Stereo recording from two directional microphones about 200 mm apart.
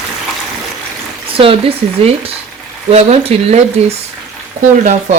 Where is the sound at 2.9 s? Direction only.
30° right (ahead or behind).